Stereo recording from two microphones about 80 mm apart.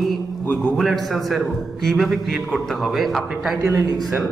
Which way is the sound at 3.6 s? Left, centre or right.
Right.